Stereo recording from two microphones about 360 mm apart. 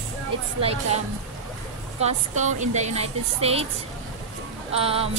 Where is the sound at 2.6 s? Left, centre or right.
Centre.